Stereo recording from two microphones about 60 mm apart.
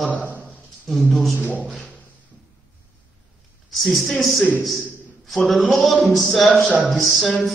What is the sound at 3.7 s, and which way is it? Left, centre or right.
Speech, centre.